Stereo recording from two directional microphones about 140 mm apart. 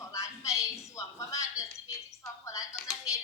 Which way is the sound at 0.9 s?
20° left (ahead or behind).